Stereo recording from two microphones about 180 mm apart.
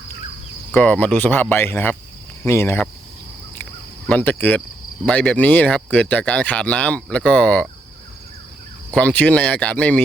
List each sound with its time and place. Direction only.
0.7 s speech: 10° left (ahead or behind)
4.1 s speech: 10° left (ahead or behind)
8.9 s speech: 5° left (ahead or behind)